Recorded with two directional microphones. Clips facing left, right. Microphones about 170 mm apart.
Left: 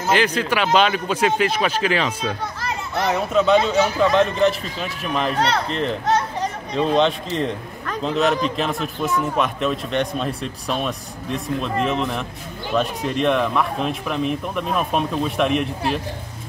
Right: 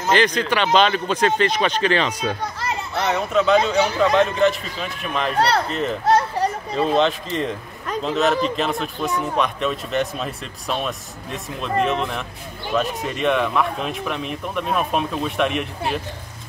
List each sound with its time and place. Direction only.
0.0 s a man's voice: 5° left (ahead or behind)